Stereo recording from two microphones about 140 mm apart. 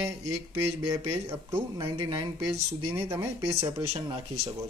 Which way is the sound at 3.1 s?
20° right (ahead or behind).